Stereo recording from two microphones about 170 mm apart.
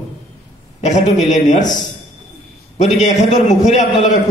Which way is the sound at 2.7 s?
45° left (ahead or behind).